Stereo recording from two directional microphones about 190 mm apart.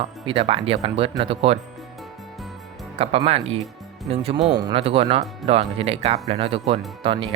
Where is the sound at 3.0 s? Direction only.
30° right (ahead or behind).